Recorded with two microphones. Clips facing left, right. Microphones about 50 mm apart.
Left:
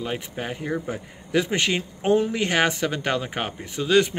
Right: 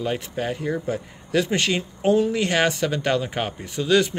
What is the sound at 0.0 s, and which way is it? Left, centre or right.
A man's voice, centre.